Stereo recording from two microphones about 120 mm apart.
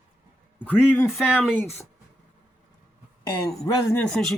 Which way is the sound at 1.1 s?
5° right (ahead or behind).